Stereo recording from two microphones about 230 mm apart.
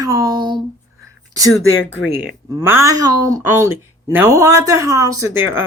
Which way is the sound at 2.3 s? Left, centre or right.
Centre.